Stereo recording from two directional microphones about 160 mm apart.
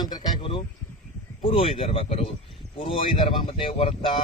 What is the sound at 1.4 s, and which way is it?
Speech, 35° left (ahead or behind).